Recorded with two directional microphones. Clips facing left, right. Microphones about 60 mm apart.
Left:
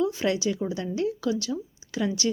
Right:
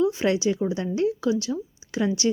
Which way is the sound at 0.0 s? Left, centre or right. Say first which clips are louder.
Right 3 dB; right.